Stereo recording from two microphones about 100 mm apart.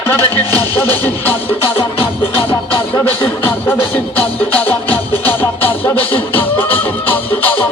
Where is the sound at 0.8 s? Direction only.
20° left (ahead or behind).